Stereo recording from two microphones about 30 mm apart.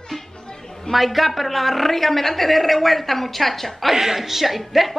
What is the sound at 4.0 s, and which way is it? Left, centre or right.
Speech, centre.